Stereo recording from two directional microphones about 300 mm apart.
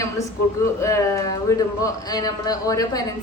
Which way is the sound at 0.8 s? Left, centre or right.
Centre.